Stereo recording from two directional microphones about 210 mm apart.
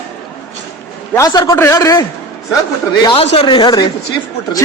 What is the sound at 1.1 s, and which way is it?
Speech, 15° left (ahead or behind).